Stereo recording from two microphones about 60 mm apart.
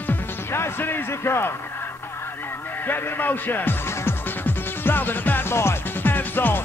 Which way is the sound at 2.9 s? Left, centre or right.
Left.